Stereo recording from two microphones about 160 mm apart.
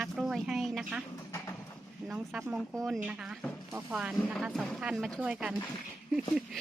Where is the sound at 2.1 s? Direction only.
5° right (ahead or behind).